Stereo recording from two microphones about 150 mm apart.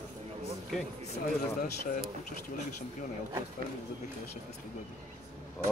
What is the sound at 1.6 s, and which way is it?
Speech, 65° left (ahead or behind).